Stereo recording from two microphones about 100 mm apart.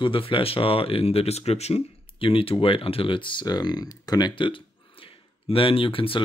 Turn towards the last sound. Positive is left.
turn(degrees=65)  # may be behind; listen again after turning